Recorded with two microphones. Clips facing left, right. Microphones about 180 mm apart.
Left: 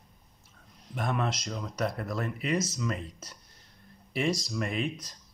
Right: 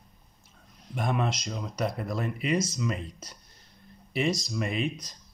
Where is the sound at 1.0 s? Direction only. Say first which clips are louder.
Right 2 dB; 15° right (ahead or behind).